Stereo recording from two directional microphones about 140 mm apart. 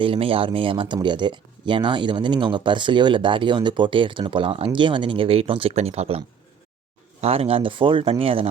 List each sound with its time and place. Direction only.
0.0 s speech: 40° right (ahead or behind)